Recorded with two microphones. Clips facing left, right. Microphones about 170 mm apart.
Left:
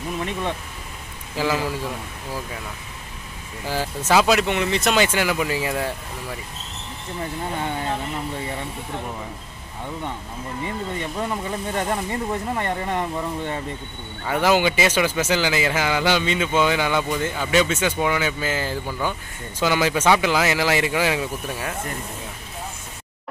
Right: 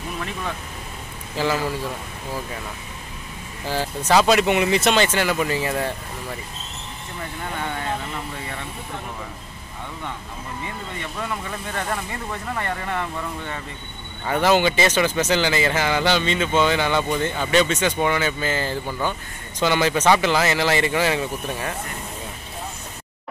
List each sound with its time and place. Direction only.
0.2 s speech: 25° left (ahead or behind)
1.3 s speech: 10° left (ahead or behind)
3.6 s speech: 10° left (ahead or behind)
4.5 s speech: 10° right (ahead or behind)
4.9 s speech: 10° left (ahead or behind)
7.4 s speech: 25° left (ahead or behind)
11.0 s speech: 25° left (ahead or behind)
14.2 s speech: 5° left (ahead or behind)